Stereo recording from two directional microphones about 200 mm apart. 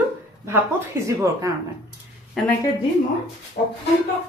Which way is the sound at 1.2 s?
15° right (ahead or behind).